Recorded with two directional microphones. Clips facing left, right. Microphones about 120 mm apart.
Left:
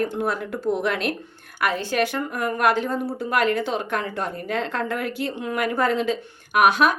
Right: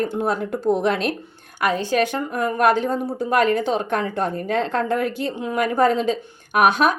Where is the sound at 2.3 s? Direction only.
30° right (ahead or behind).